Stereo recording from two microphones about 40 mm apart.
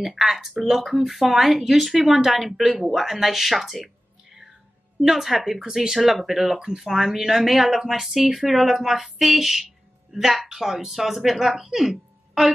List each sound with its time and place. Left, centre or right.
0.0 s speech: centre
5.0 s speech: centre
11.9 s a sound: centre